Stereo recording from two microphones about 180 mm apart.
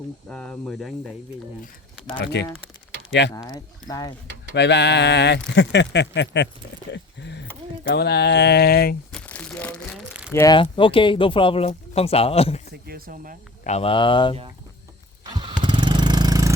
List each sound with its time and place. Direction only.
0.3 s speech: 5° left (ahead or behind)
2.2 s speech: 70° left (ahead or behind)
3.3 s speech: 20° left (ahead or behind)
4.5 s speech: 70° left (ahead or behind)
9.1 s crumpling: 5° left (ahead or behind)
10.1 s speech: 5° right (ahead or behind)
10.3 s speech: 20° left (ahead or behind)
12.7 s speech: 60° right (ahead or behind)
13.7 s speech: 35° left (ahead or behind)
15.2 s vehicle: 25° right (ahead or behind)